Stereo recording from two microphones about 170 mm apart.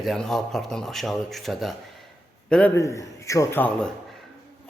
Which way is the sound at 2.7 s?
15° left (ahead or behind).